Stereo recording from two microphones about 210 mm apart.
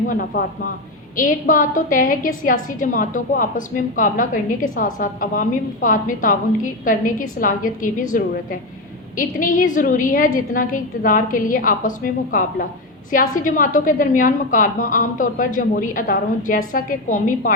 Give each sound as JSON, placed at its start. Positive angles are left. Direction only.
{"t": 0.1, "sound": "a woman's voice", "side_deg": 40}